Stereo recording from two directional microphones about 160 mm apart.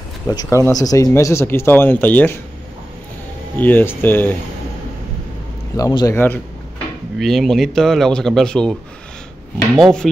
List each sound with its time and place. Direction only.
0.3 s speech: 20° left (ahead or behind)
3.5 s speech: 10° left (ahead or behind)
5.8 s speech: 20° left (ahead or behind)
7.2 s a man's voice: centre (ahead or behind)
9.8 s a man's voice: centre (ahead or behind)